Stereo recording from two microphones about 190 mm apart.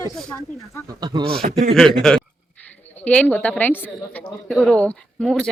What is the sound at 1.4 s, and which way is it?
Speech, 45° right (ahead or behind).